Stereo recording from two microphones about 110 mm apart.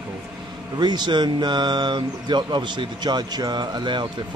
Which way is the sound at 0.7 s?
40° right (ahead or behind).